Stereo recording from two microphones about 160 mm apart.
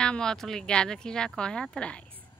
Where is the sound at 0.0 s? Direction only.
5° left (ahead or behind).